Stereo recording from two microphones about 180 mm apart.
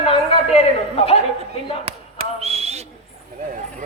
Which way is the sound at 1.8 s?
35° right (ahead or behind).